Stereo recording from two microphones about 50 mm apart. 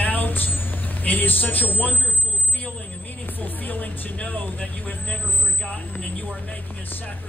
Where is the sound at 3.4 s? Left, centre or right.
Left.